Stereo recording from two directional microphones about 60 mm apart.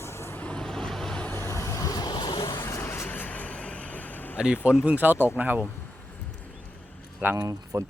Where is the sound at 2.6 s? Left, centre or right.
Left.